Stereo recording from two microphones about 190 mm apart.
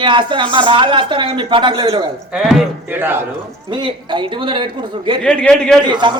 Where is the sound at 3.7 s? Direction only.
25° right (ahead or behind).